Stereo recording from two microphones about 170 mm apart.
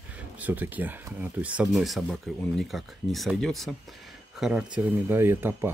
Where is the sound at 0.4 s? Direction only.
10° right (ahead or behind).